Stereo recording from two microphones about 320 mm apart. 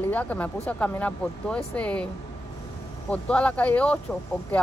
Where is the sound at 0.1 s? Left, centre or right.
Centre.